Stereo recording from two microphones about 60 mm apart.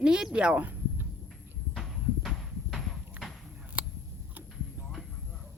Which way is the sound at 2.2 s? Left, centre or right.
Centre.